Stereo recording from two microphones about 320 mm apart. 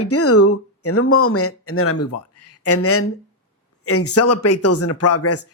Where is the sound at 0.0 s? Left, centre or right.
Left.